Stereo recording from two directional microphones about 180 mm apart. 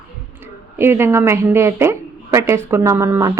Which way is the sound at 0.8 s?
15° right (ahead or behind).